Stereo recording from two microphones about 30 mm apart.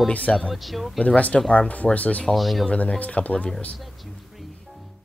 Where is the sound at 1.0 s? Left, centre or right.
Left.